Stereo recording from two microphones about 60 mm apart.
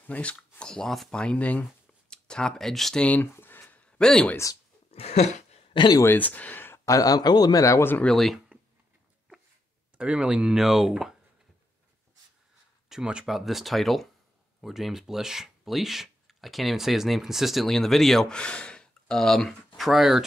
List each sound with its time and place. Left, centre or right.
0.0 s speech: left; by 1.2 s centre
1.2 s speech: left
1.6 s a sound: centre
3.0 s speech: left
3.3 s a sound: left
3.8 s a sound: centre
6.0 s speech: left
6.9 s a man's voice: left
8.1 s speech: centre
9.9 s speech: centre
12.9 s speech: centre
13.2 s speech: centre
18.4 s speech: centre